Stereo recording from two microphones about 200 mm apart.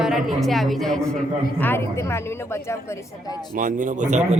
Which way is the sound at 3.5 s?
40° right (ahead or behind).